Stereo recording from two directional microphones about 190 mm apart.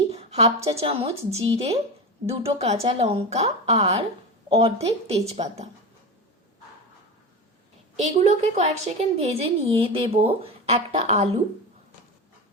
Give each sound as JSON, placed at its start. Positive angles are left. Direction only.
{"t": 0.1, "sound": "a woman's voice", "side_deg": -35}
{"t": 8.0, "sound": "a woman's voice", "side_deg": -35}